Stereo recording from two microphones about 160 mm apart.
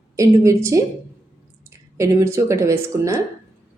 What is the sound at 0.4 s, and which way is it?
Speech, 20° right (ahead or behind).